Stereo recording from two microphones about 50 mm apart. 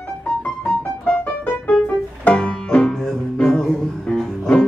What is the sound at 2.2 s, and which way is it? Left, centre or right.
Banjo, left.